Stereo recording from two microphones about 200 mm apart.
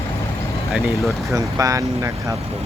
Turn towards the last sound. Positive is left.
turn(degrees=-15)  # may be behind; listen again after turning